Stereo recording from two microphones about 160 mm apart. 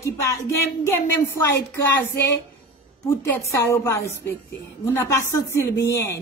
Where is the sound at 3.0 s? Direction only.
15° left (ahead or behind).